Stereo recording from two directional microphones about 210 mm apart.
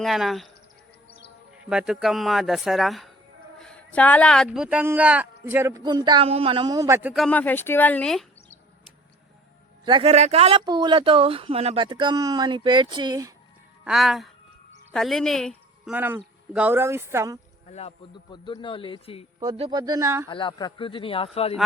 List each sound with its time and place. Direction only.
0.0 s speech: centre (ahead or behind)
1.7 s speech: 5° right (ahead or behind)
9.8 s speech: 25° right (ahead or behind)
13.8 s a woman's voice: centre (ahead or behind)
16.0 s speech: 10° right (ahead or behind)
17.7 s a man's voice: 30° left (ahead or behind)
19.4 s speech: 25° right (ahead or behind)
20.2 s a man's voice: 20° left (ahead or behind)